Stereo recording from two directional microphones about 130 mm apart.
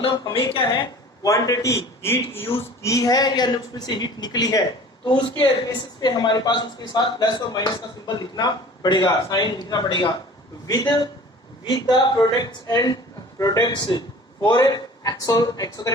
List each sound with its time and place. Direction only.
0.0 s speech: 40° left (ahead or behind)
1.2 s a man's voice: 25° left (ahead or behind)